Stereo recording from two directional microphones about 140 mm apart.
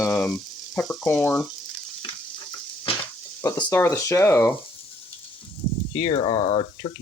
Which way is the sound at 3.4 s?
15° left (ahead or behind).